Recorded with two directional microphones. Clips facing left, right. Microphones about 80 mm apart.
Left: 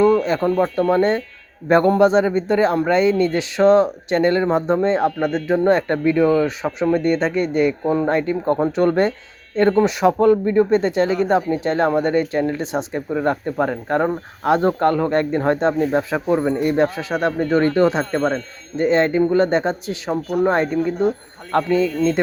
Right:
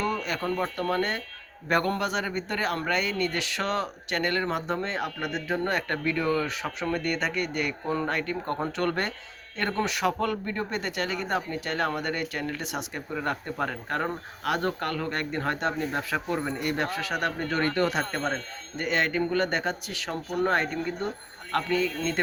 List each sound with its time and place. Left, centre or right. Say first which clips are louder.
0.0 s speech: left 13 dB; left
21.5 s speech: left 9 dB; left